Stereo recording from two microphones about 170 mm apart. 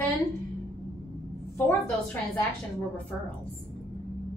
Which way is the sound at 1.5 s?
15° left (ahead or behind).